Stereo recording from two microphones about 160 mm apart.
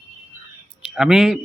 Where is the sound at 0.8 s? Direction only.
5° right (ahead or behind).